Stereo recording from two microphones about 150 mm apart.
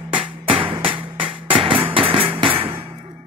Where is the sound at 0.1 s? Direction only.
35° right (ahead or behind).